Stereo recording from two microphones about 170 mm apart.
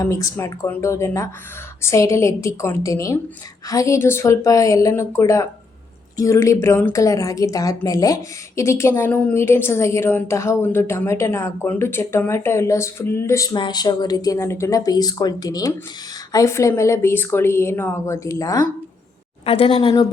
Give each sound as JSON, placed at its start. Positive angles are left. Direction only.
{"t": 0.0, "sound": "a woman's voice", "side_deg": 20}
{"t": 19.5, "sound": "a woman's voice", "side_deg": 35}